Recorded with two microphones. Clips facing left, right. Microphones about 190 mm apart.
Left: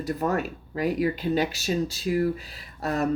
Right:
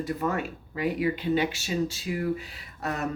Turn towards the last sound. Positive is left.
turn(degrees=35)  # may be behind; listen again after turning